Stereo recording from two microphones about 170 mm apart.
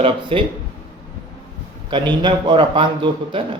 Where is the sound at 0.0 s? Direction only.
30° right (ahead or behind).